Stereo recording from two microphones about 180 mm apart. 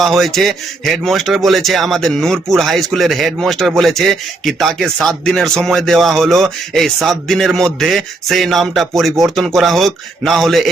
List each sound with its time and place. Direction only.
0.0 s speech: centre (ahead or behind)